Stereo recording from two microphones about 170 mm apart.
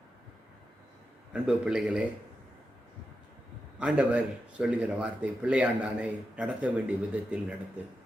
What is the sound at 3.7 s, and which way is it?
Speech, 5° right (ahead or behind).